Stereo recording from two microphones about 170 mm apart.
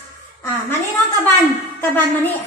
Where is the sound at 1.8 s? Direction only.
10° left (ahead or behind).